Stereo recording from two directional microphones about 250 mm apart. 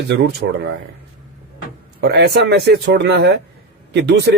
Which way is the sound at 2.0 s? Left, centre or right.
Right.